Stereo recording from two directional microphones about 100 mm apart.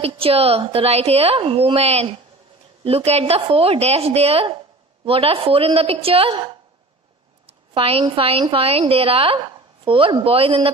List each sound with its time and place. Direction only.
0.0 s a woman's voice: 75° right (ahead or behind)
5.0 s a woman's voice: 70° right (ahead or behind)